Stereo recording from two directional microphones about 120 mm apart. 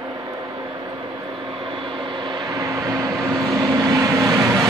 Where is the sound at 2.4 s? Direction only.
25° right (ahead or behind).